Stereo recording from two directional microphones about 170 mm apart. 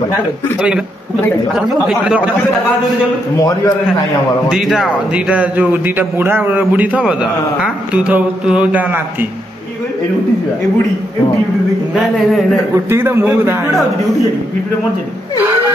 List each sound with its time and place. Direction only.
0.6 s speech: 5° right (ahead or behind)
3.3 s a man's voice: 20° left (ahead or behind)
4.5 s a man's voice: centre (ahead or behind)
12.7 s a man's voice: 15° right (ahead or behind)